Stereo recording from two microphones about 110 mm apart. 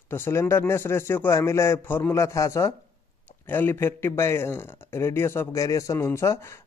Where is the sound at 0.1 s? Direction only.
25° left (ahead or behind).